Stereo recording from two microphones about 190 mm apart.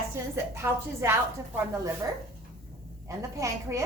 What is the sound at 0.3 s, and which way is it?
Speech, 15° right (ahead or behind).